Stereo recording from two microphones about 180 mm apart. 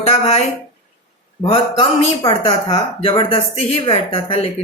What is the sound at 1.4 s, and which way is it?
A woman's voice, 30° left (ahead or behind).